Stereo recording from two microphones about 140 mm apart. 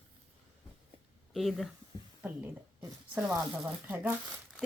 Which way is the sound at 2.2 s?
10° right (ahead or behind).